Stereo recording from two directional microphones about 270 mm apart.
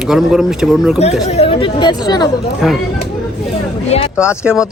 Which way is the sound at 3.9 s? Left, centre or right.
Left.